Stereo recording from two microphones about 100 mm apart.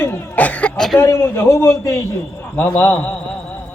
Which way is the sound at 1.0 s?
25° left (ahead or behind).